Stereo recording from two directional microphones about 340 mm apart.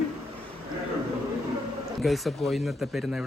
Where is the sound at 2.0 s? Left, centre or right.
Centre.